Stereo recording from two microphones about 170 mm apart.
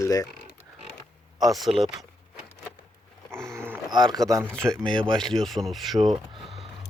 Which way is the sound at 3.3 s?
15° right (ahead or behind).